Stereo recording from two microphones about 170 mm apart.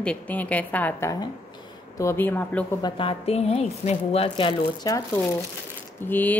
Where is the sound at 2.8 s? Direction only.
30° left (ahead or behind).